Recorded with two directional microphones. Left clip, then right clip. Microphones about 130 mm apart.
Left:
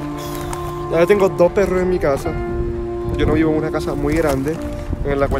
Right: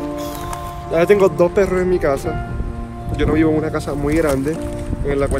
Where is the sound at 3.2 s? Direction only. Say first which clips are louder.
Right 1 dB; 20° left (ahead or behind).